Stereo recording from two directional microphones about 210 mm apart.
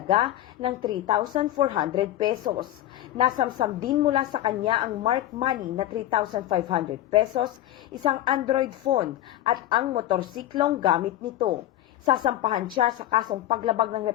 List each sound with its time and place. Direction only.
0.1 s a woman's voice: 25° right (ahead or behind)